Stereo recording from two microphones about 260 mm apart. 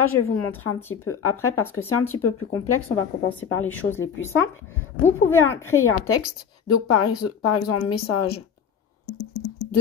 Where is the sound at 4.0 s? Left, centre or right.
Left.